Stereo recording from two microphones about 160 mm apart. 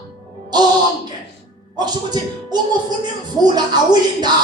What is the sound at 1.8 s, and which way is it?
A man's voice, 25° right (ahead or behind).